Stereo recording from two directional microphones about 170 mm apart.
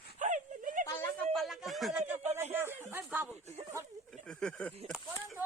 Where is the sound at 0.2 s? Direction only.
50° right (ahead or behind).